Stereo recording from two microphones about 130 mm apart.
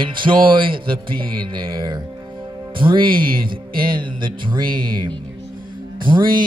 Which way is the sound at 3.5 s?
40° right (ahead or behind).